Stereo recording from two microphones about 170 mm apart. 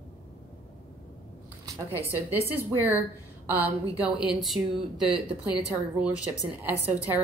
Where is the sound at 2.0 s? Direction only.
15° right (ahead or behind).